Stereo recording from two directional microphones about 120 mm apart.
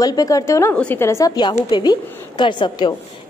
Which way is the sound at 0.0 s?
30° left (ahead or behind).